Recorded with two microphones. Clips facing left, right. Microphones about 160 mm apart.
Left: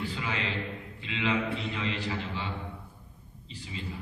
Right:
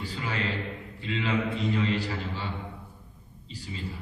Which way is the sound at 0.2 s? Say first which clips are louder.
Right 2 dB; 40° right (ahead or behind).